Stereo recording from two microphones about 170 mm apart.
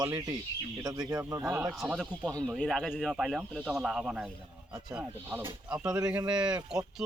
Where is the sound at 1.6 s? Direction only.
5° right (ahead or behind).